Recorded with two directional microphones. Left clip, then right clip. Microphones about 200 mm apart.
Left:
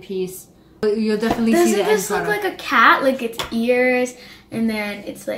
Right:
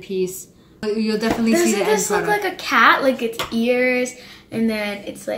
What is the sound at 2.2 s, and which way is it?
A woman's voice, 5° left (ahead or behind).